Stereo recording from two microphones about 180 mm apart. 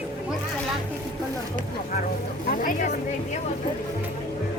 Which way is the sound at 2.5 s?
50° left (ahead or behind).